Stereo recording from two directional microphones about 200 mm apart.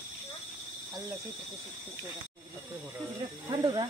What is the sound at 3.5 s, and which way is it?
Speech, 20° right (ahead or behind).